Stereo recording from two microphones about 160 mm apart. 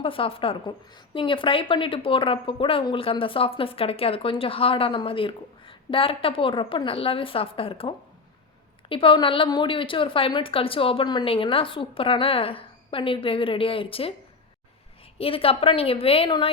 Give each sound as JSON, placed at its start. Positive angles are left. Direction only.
{"t": 0.0, "sound": "a woman's voice", "side_deg": 35}
{"t": 15.2, "sound": "a woman's voice", "side_deg": 35}